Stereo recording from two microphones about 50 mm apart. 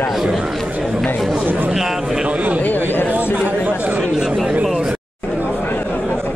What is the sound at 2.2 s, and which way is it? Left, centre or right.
Speech, right.